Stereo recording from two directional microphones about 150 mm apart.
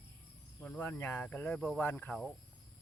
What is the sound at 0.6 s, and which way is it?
Speech, 15° left (ahead or behind).